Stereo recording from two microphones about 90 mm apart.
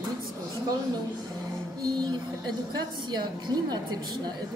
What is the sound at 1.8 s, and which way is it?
A woman's voice, 55° right (ahead or behind).